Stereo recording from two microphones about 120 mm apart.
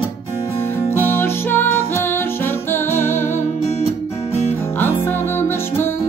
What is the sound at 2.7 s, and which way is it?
Music, 20° left (ahead or behind).